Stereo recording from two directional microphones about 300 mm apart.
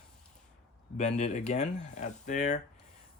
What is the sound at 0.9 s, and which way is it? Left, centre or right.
Speech, left.